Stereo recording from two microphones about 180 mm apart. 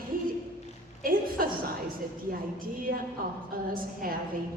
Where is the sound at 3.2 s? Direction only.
55° right (ahead or behind).